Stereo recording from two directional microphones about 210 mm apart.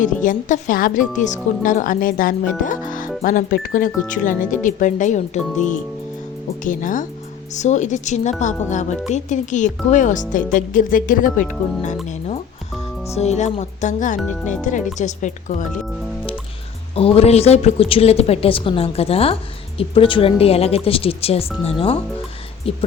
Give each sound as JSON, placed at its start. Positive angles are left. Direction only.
{"t": 0.0, "sound": "speech", "side_deg": 40}
{"t": 13.1, "sound": "speech", "side_deg": 30}
{"t": 16.9, "sound": "a woman's voice", "side_deg": 30}